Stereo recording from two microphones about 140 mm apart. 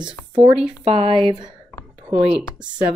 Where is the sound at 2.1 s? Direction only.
45° right (ahead or behind).